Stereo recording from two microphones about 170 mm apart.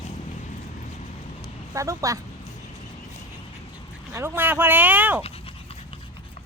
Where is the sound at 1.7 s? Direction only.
20° right (ahead or behind).